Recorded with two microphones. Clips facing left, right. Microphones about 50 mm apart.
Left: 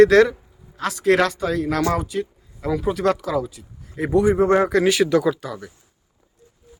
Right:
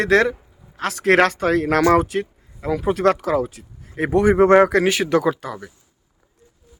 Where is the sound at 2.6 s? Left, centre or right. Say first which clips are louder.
Right 2 dB; right.